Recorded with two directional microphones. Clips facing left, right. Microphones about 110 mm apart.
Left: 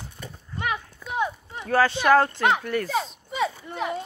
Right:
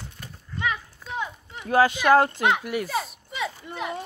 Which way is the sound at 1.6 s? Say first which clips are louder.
Right 1 dB; 15° right (ahead or behind).